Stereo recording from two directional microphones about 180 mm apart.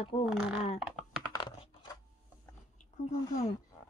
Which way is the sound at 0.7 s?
Centre (ahead or behind).